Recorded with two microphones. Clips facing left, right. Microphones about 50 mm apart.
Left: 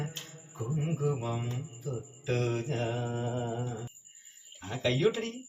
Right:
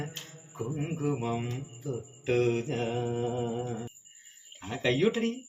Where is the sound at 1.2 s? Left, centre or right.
Right.